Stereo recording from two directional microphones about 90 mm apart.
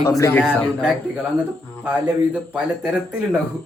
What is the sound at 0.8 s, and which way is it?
Speech, 5° right (ahead or behind).